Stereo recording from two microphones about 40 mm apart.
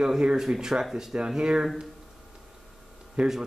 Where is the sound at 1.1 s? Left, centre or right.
Right.